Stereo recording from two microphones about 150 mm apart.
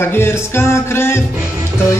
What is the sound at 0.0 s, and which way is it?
Speech, 15° left (ahead or behind).